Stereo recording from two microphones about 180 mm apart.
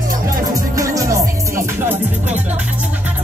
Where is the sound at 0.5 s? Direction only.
20° right (ahead or behind).